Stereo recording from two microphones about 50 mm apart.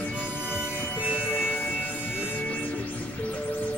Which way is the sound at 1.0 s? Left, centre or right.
Right.